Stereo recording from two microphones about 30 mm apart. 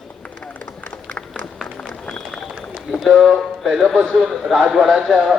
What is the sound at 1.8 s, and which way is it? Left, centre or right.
Run, left.